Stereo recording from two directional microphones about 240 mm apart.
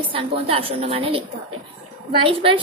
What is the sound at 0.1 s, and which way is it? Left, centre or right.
A woman's voice, right.